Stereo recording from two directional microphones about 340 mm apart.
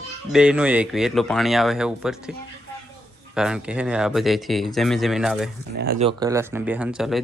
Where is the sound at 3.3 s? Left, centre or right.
Centre.